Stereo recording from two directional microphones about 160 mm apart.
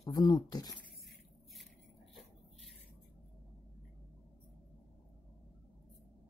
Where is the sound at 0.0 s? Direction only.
25° left (ahead or behind).